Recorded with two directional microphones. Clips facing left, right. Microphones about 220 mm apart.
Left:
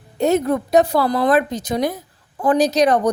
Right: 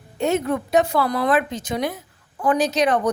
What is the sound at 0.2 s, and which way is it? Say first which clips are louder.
A woman's voice: left 4 dB; 40° left (ahead or behind).